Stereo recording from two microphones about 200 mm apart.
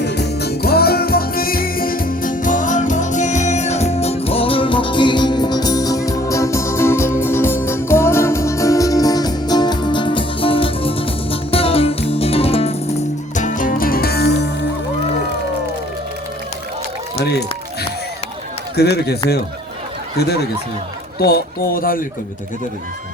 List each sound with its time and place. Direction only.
0.0 s music: 55° left (ahead or behind)
18.8 s speech: 55° left (ahead or behind)